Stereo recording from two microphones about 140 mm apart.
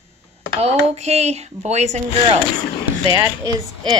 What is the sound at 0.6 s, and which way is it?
Speech, 50° right (ahead or behind).